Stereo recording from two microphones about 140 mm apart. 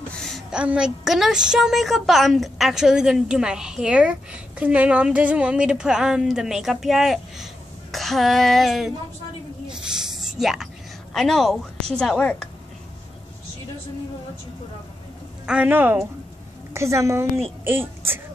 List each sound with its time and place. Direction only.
0.2 s a woman's voice: centre (ahead or behind)
9.7 s a sound: 5° right (ahead or behind)
11.1 s a woman's voice: centre (ahead or behind)
15.4 s a woman's voice: 10° right (ahead or behind)